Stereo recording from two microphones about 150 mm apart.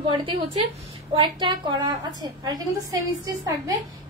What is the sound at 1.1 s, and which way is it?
A woman's voice, 30° right (ahead or behind).